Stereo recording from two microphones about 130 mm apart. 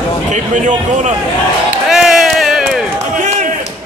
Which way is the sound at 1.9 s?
Centre (ahead or behind).